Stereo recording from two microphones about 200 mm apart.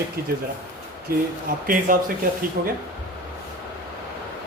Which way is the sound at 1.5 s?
45° right (ahead or behind).